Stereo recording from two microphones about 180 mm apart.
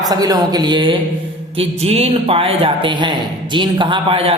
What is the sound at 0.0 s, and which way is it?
A man's voice, 20° right (ahead or behind).